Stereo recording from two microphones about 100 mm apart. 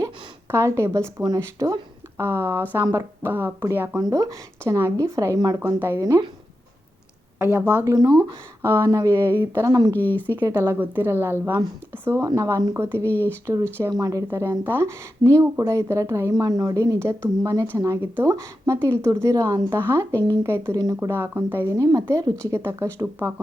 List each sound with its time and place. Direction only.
0.5 s a woman's voice: 30° right (ahead or behind)
4.0 s a woman's voice: 35° right (ahead or behind)
7.3 s a woman's voice: 20° right (ahead or behind)
9.6 s a woman's voice: 35° right (ahead or behind)
9.9 s speech: 20° left (ahead or behind)
10.2 s a woman's voice: 20° right (ahead or behind)
14.6 s a woman's voice: 20° right (ahead or behind)